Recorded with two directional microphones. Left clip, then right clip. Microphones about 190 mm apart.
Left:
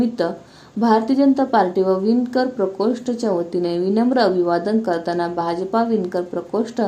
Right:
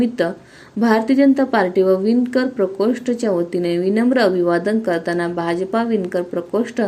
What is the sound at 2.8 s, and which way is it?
A woman's voice, 10° right (ahead or behind).